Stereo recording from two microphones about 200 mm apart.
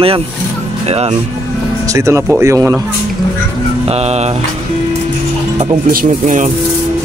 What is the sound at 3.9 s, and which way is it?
Speech, 30° right (ahead or behind).